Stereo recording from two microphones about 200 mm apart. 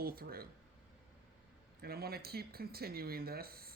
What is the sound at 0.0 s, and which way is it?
Speech, 50° right (ahead or behind).